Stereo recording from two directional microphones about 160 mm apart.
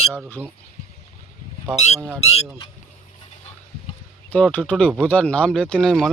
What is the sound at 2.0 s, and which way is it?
Speech, 15° right (ahead or behind).